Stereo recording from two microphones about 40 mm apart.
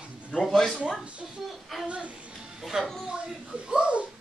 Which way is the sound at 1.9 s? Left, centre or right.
Right.